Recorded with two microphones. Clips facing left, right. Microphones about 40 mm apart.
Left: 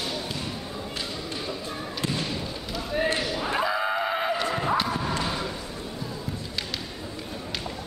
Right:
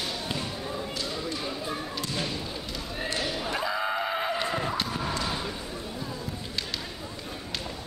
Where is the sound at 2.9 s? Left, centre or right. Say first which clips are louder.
Left 7 dB; left.